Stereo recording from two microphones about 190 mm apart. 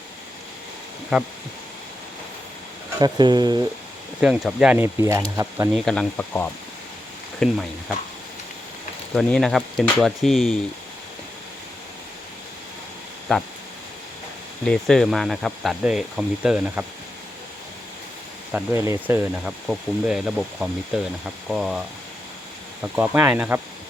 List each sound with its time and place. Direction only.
3.0 s speech: 20° right (ahead or behind)
4.2 s speech: 5° right (ahead or behind)
5.7 s speech: 5° left (ahead or behind)
9.1 s speech: centre (ahead or behind)
13.3 s speech: 5° left (ahead or behind)
14.6 s speech: 5° left (ahead or behind)
18.5 s speech: 10° right (ahead or behind)